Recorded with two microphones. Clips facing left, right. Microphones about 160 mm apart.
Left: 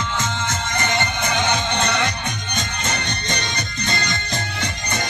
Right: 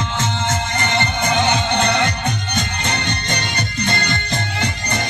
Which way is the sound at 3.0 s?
55° right (ahead or behind).